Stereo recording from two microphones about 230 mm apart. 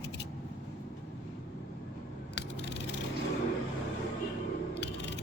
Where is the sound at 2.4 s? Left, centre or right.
Left.